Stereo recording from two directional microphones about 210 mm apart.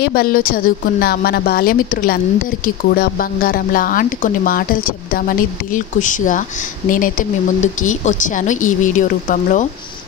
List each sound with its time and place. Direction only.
0.0 s a woman's voice: 45° left (ahead or behind)